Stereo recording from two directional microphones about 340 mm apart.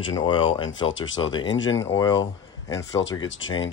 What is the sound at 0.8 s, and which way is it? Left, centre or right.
Speech, left.